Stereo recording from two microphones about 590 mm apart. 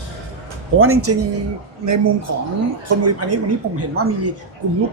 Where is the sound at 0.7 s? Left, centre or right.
Right.